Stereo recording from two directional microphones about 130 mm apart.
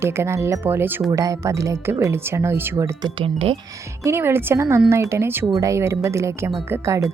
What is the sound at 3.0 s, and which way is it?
Speech, 45° right (ahead or behind).